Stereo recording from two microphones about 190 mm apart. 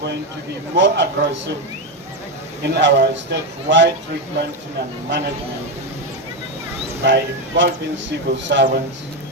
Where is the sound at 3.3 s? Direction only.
70° right (ahead or behind).